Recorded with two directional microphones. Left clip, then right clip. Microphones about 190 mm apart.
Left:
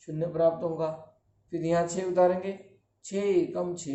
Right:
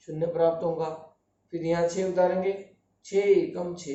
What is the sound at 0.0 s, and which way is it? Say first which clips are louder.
Speech: right 1 dB; 30° left (ahead or behind).